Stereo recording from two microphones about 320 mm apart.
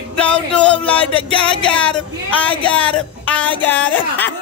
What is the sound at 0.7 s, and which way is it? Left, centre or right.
Music, centre.